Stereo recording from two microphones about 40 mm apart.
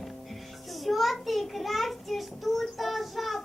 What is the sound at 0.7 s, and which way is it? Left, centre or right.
Child singing, centre.